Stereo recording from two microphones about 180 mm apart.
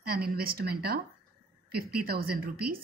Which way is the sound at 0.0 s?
55° right (ahead or behind).